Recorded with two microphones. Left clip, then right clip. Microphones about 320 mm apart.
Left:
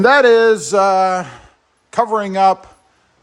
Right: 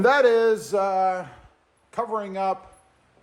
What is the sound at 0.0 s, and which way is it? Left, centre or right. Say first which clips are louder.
Speech: left 8 dB; left.